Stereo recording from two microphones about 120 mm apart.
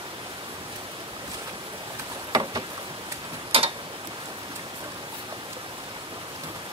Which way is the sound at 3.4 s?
50° right (ahead or behind).